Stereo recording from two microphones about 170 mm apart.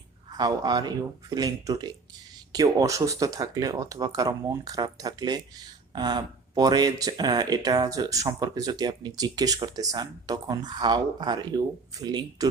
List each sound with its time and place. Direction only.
0.3 s speech: 25° right (ahead or behind)